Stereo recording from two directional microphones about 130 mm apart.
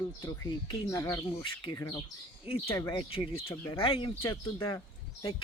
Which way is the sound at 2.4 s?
45° left (ahead or behind).